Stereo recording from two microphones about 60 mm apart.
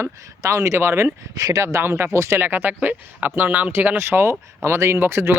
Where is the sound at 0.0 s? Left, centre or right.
Right.